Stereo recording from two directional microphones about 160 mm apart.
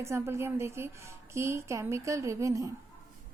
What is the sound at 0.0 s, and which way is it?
A child's voice, 15° right (ahead or behind).